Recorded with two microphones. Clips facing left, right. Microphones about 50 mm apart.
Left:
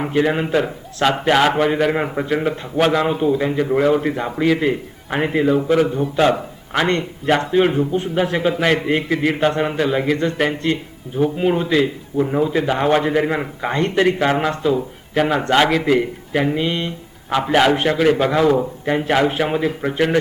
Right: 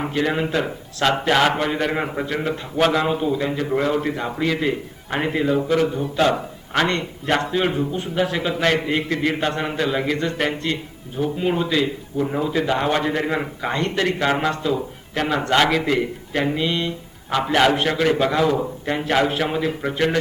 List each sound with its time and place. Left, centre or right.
0.1 s a man's voice: centre
7.6 s a man's voice: centre
11.2 s a man's voice: centre
13.7 s a man's voice: centre